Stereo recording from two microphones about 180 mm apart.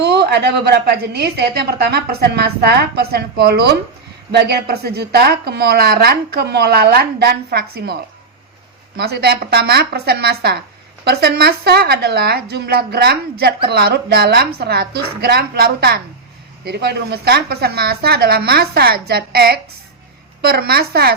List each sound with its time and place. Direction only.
0.0 s speech: 70° right (ahead or behind)
9.0 s speech: 60° right (ahead or behind)